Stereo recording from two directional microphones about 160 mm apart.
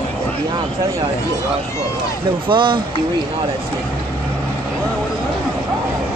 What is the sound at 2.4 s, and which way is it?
Speech, 30° right (ahead or behind).